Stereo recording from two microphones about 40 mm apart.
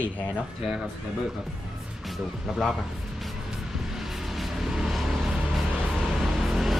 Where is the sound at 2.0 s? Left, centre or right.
Centre.